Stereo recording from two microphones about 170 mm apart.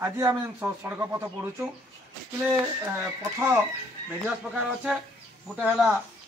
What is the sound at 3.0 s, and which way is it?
A man's voice, 15° right (ahead or behind).